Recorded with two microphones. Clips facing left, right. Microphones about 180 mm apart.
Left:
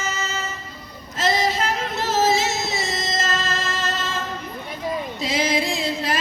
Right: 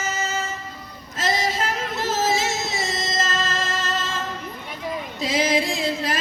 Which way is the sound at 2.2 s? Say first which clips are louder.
Left 2 dB; 45° right (ahead or behind).